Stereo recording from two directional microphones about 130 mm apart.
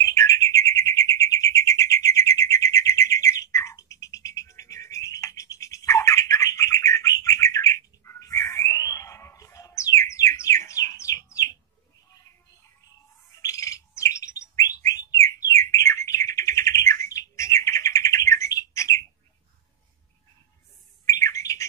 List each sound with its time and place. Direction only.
0.0 s bird: 25° left (ahead or behind)
12.1 s music: 25° left (ahead or behind)
13.4 s bird: 25° left (ahead or behind)
21.0 s bird: 25° left (ahead or behind)